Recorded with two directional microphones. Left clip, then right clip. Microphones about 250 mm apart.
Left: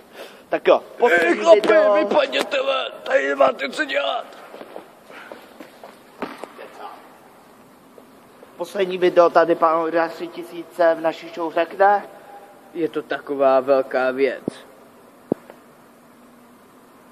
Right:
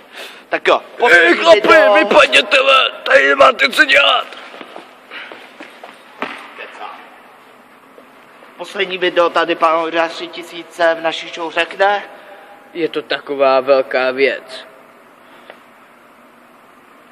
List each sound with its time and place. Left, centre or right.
0.1 s a sound: centre
0.9 s a man's voice: right
1.7 s a man's voice: right
8.5 s speech: left
9.6 s a man's voice: centre
10.2 s a man's voice: right
10.8 s a man's voice: centre
12.7 s a man's voice: centre